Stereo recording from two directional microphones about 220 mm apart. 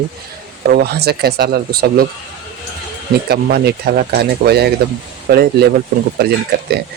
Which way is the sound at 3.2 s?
45° right (ahead or behind).